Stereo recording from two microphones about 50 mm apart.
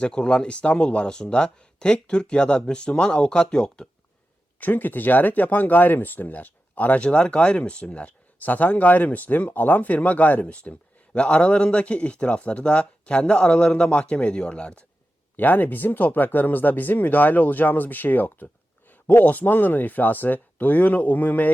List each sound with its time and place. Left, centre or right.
0.0 s speech: left
4.6 s speech: left
15.4 s speech: left